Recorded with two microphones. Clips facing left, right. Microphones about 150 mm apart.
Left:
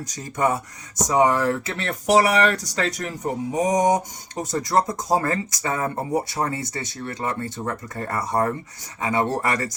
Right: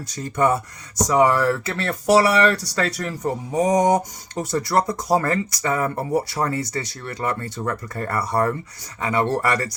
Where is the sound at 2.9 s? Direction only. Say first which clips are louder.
Right 2 dB; 20° left (ahead or behind).